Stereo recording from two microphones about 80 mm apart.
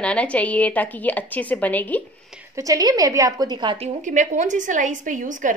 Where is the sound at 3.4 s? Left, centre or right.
Right.